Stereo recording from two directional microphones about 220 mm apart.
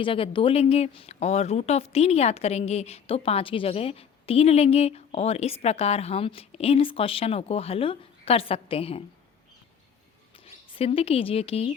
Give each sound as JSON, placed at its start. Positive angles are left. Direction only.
{"t": 0.0, "sound": "speech", "side_deg": 25}
{"t": 10.3, "sound": "speech", "side_deg": 25}